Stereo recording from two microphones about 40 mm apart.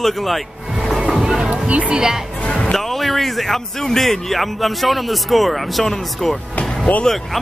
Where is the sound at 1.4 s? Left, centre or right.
Right.